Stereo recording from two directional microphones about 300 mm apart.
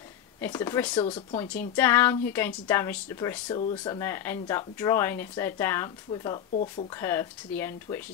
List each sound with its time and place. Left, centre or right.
0.4 s speech: centre
6.5 s speech: left
7.0 s speech: centre